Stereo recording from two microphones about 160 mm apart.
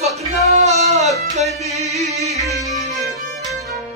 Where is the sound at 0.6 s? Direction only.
45° right (ahead or behind).